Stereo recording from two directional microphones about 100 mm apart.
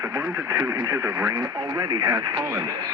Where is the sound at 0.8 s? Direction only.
35° right (ahead or behind).